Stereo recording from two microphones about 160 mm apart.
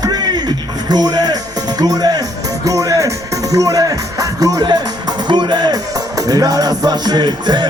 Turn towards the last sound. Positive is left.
turn(degrees=-25)  # may be behind; listen again after turning